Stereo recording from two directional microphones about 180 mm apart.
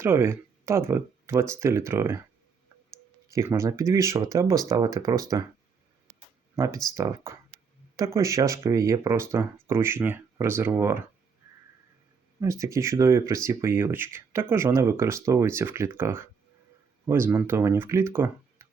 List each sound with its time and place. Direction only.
0.0 s speech: 15° right (ahead or behind)
3.2 s speech: 15° right (ahead or behind)
6.9 s speech: 20° right (ahead or behind)
12.4 s speech: 15° right (ahead or behind)